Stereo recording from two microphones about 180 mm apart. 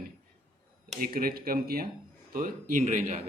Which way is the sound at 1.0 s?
55° right (ahead or behind).